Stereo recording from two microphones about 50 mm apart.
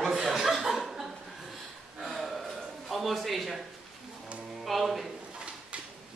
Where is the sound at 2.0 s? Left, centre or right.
Centre.